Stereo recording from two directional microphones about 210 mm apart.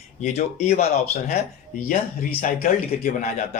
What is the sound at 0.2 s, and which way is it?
Speech, 30° left (ahead or behind).